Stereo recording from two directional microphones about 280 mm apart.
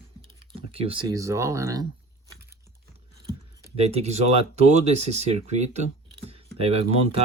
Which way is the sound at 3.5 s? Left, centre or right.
Centre.